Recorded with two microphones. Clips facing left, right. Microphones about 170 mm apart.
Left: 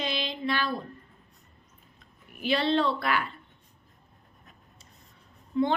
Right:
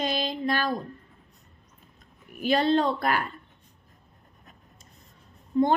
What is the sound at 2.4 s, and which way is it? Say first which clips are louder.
Speech: right 3 dB; 45° right (ahead or behind).